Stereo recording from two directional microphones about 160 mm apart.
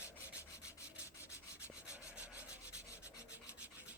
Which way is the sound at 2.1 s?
10° right (ahead or behind).